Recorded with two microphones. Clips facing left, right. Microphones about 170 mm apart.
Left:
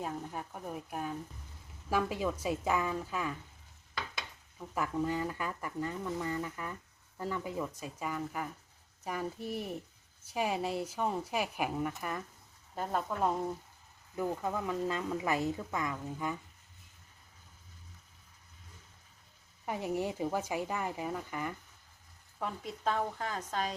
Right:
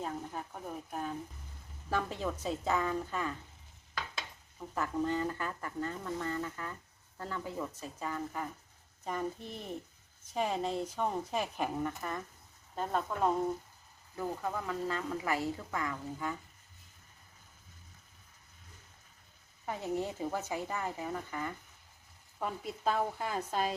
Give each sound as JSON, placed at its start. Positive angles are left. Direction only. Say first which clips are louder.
{"t": 0.0, "sound": "speech", "louder": "even", "side_deg": 10}
{"t": 4.7, "sound": "speech", "louder": "even", "side_deg": 10}
{"t": 14.2, "sound": "speech", "louder": "left 2 dB", "side_deg": 15}
{"t": 19.6, "sound": "speech", "louder": "left 1 dB", "side_deg": 15}
{"t": 22.4, "sound": "speech", "louder": "right 1 dB", "side_deg": -5}